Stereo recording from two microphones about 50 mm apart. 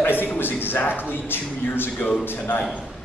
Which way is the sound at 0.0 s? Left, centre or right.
Left.